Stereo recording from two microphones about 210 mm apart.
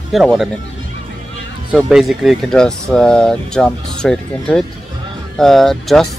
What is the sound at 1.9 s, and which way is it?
Speech, centre (ahead or behind).